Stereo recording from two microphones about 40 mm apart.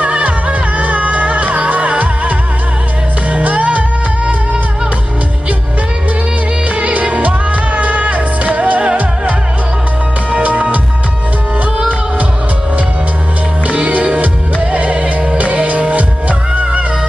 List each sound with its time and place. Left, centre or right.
0.0 s music: right
6.7 s music: right
10.3 s music: right
13.7 s music: right